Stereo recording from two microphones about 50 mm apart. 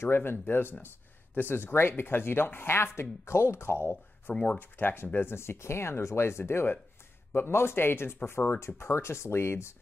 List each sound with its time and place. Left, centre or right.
0.0 s speech: left
3.9 s speech: left
4.6 s speech: left
5.3 s speech: left